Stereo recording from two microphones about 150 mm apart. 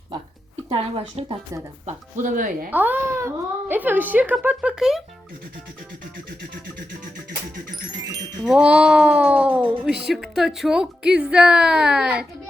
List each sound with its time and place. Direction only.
0.7 s speech: 40° right (ahead or behind)
1.9 s speech: 60° right (ahead or behind)
2.6 s speech: 10° right (ahead or behind)
8.4 s a woman's voice: 5° right (ahead or behind)